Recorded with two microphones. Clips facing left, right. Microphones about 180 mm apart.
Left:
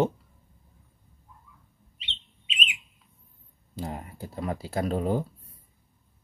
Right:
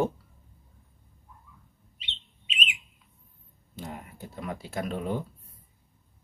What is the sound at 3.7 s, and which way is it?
Speech, 35° left (ahead or behind).